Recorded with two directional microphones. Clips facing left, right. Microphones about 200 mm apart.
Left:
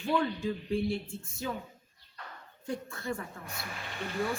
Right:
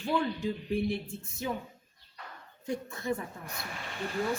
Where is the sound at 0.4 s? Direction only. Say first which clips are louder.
Even; 15° right (ahead or behind).